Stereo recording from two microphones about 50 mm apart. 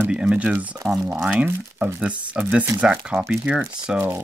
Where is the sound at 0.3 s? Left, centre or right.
Right.